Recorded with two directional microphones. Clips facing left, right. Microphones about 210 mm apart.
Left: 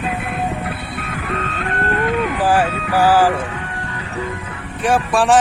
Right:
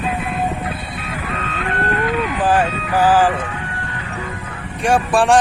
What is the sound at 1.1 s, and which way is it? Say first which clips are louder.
Vehicle: left 1 dB; 45° left (ahead or behind).